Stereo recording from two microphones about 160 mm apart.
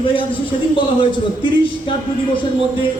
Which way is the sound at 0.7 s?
30° left (ahead or behind).